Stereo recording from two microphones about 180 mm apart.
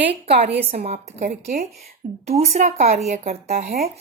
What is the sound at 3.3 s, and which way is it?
Speech, 55° right (ahead or behind).